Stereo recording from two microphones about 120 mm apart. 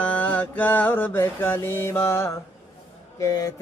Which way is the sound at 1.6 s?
20° left (ahead or behind).